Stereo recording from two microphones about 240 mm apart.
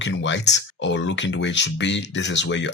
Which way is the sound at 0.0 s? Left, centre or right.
Left.